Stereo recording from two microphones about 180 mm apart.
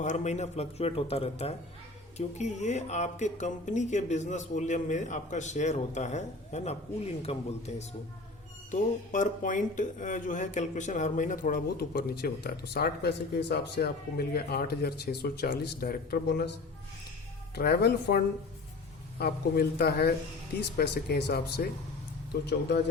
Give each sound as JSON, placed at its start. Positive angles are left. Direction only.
{"t": 0.0, "sound": "speech", "side_deg": 40}
{"t": 19.2, "sound": "speech", "side_deg": 65}